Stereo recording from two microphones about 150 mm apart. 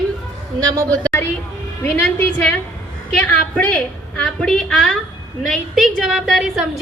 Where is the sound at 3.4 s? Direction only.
10° left (ahead or behind).